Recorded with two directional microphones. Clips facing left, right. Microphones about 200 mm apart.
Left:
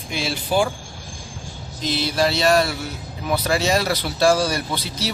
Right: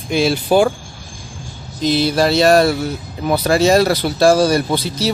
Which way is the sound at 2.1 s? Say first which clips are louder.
Right 5 dB; 40° right (ahead or behind).